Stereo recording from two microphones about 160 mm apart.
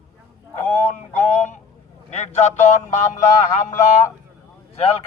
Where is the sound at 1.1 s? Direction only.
45° left (ahead or behind).